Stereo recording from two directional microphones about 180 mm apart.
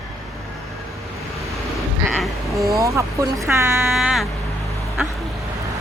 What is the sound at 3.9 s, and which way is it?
Speech, centre (ahead or behind).